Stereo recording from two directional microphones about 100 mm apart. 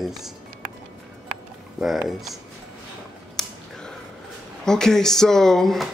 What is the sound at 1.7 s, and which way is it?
Speech, 5° right (ahead or behind).